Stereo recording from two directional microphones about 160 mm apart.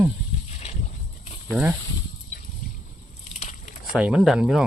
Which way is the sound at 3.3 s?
45° left (ahead or behind).